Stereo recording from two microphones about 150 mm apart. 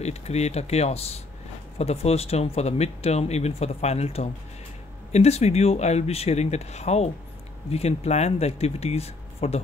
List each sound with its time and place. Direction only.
0.0 s speech: 45° left (ahead or behind)